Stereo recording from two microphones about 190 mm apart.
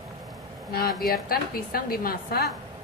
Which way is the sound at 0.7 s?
55° left (ahead or behind).